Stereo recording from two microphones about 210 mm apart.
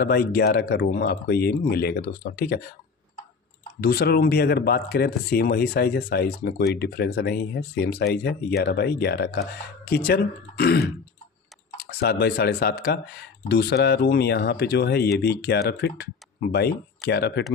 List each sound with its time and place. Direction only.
0.0 s speech: 45° left (ahead or behind)
3.8 s speech: 50° left (ahead or behind)